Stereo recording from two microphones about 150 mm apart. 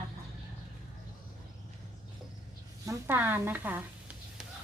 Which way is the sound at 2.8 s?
15° right (ahead or behind).